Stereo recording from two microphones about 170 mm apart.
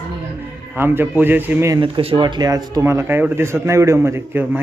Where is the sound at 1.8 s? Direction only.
30° right (ahead or behind).